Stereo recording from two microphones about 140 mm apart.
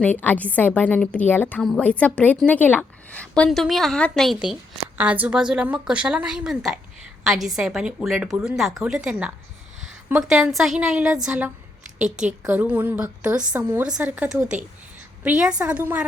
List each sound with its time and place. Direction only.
0.0 s a woman's voice: 10° left (ahead or behind); by 16.0 s 10° right (ahead or behind)